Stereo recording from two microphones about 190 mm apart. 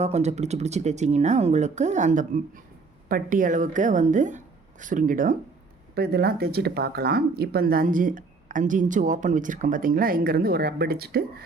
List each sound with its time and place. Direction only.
0.0 s speech: 35° right (ahead or behind)
5.9 s speech: 55° right (ahead or behind)